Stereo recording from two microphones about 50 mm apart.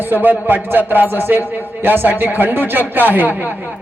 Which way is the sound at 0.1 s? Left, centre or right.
Right.